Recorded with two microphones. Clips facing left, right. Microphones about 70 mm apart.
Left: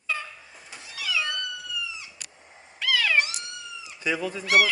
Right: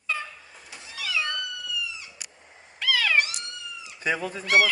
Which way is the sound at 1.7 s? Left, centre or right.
Left.